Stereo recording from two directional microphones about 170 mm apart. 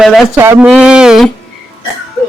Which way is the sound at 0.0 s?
Centre (ahead or behind).